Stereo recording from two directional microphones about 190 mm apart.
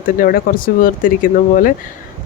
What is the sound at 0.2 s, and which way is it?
Speech, 50° left (ahead or behind).